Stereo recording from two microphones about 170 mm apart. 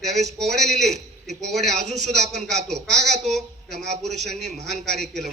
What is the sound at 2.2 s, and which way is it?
Speech, 45° right (ahead or behind).